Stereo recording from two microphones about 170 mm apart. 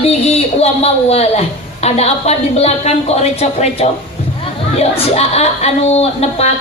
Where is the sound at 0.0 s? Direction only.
35° left (ahead or behind).